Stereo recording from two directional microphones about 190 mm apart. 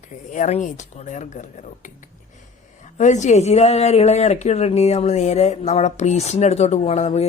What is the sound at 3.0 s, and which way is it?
Speech, 40° left (ahead or behind).